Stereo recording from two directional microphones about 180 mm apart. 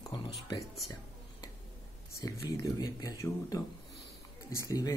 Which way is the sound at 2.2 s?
20° left (ahead or behind).